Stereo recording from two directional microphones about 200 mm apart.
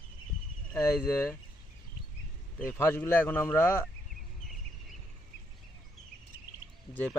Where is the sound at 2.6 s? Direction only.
10° left (ahead or behind).